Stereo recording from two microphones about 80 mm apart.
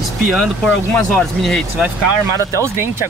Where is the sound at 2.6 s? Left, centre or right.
Right.